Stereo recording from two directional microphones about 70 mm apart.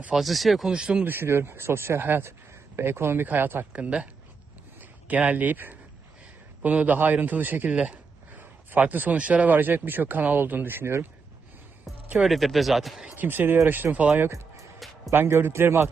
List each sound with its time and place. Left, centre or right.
0.1 s speech: centre
0.7 s speech: centre
1.0 s speech: right
3.7 s speech: centre; by 11.0 s right
11.9 s music: centre
12.3 s speech: centre
13.1 s speech: right
14.2 s music: right
15.1 s speech: right